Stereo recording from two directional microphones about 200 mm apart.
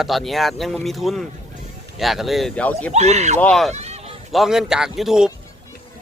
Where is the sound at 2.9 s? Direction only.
35° right (ahead or behind).